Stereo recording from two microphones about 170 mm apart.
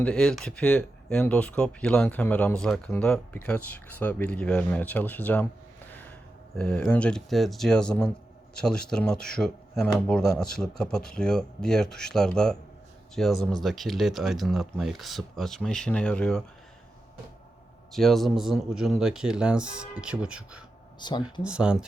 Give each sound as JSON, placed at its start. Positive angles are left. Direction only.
{"t": 0.0, "sound": "speech", "side_deg": 5}
{"t": 6.6, "sound": "speech", "side_deg": 5}
{"t": 17.9, "sound": "speech", "side_deg": 0}
{"t": 21.0, "sound": "speech", "side_deg": 25}
{"t": 21.4, "sound": "speech", "side_deg": -5}